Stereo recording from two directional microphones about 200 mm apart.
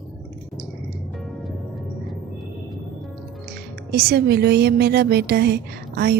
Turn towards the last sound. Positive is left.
turn(degrees=-55)  # may be behind; listen again after turning